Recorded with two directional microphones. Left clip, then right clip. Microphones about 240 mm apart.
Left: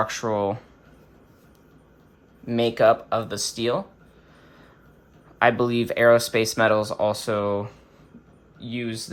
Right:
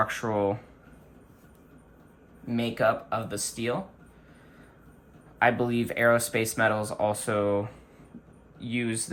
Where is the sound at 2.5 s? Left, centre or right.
Left.